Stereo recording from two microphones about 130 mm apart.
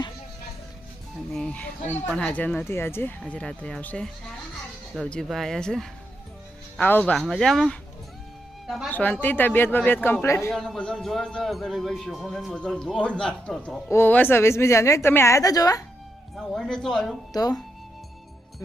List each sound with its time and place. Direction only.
1.3 s a man's voice: 10° left (ahead or behind)
8.9 s speech: 10° left (ahead or behind)
10.5 s a man's voice: 5° left (ahead or behind)
13.9 s a woman's voice: 15° left (ahead or behind)
16.4 s a man's voice: 5° left (ahead or behind)
17.3 s a woman's voice: 30° left (ahead or behind)